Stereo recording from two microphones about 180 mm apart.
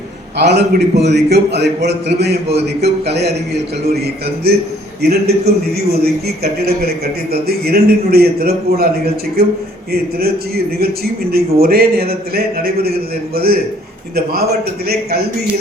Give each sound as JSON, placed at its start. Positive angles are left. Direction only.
{"t": 0.3, "sound": "a man's voice", "side_deg": -65}
{"t": 14.8, "sound": "a man's voice", "side_deg": -60}